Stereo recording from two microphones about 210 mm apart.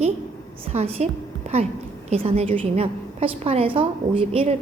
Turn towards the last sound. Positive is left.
turn(degrees=-25)  # may be behind; listen again after turning